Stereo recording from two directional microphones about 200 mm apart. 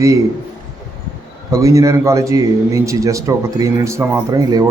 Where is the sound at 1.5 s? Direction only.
15° right (ahead or behind).